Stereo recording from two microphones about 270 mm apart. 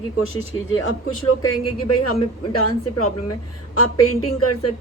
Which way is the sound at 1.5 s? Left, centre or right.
Left.